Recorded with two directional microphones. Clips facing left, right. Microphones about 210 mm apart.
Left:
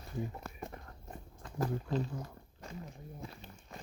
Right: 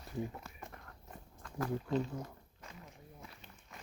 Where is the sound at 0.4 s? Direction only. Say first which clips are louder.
Left 6 dB; 50° left (ahead or behind).